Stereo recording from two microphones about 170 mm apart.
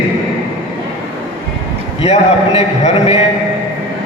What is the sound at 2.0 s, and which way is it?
A man's voice, 35° left (ahead or behind).